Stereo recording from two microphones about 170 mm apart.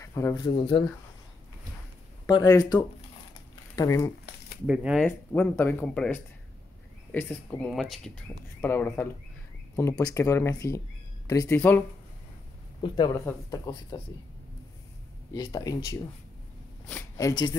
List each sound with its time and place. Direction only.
0.0 s speech: 20° left (ahead or behind)
2.3 s speech: 20° left (ahead or behind)
4.6 s speech: 5° right (ahead or behind)
5.0 s speech: 10° left (ahead or behind)
12.8 s speech: 25° left (ahead or behind)
15.3 s speech: 20° left (ahead or behind)
17.2 s speech: 25° left (ahead or behind)